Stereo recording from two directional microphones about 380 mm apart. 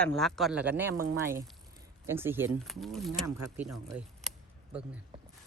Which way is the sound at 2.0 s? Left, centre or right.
Centre.